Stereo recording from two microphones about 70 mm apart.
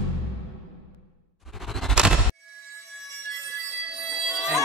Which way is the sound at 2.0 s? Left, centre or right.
Centre.